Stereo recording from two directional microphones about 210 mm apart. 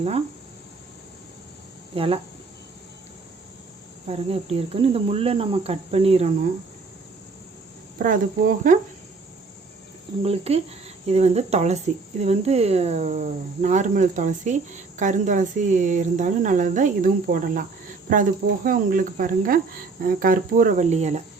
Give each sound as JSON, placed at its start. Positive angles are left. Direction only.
{"t": 2.0, "sound": "cricket", "side_deg": -25}
{"t": 4.0, "sound": "cricket", "side_deg": -30}
{"t": 7.9, "sound": "speech", "side_deg": -40}
{"t": 10.2, "sound": "cricket", "side_deg": -30}
{"t": 11.0, "sound": "speech", "side_deg": -30}